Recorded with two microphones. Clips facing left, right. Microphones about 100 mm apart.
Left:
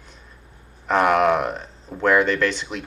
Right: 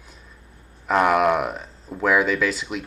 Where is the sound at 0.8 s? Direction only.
Centre (ahead or behind).